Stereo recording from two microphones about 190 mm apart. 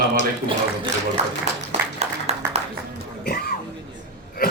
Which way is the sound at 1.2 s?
35° right (ahead or behind).